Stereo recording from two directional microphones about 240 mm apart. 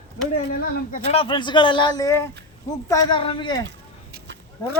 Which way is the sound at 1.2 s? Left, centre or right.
Centre.